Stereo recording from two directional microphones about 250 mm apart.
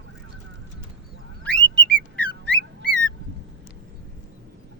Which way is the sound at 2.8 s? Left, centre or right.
Right.